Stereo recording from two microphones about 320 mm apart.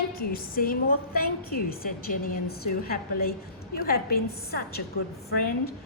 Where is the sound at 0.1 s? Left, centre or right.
Left.